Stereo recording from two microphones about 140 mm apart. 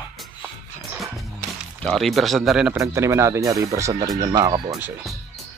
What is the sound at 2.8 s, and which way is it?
Speech, 20° right (ahead or behind).